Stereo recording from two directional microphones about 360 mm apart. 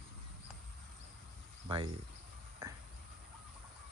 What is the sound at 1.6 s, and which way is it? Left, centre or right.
Speech, centre.